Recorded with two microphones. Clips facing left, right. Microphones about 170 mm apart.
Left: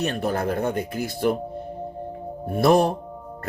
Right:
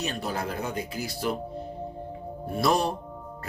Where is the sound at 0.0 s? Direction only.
55° left (ahead or behind).